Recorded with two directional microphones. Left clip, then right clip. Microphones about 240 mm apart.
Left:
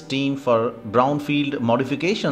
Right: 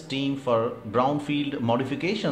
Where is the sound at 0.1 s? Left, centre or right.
Centre.